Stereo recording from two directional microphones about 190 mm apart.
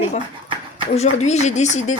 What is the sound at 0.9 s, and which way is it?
Speech, 35° left (ahead or behind).